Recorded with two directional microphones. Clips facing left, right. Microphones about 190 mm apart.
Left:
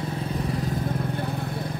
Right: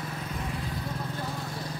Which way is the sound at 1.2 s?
60° left (ahead or behind).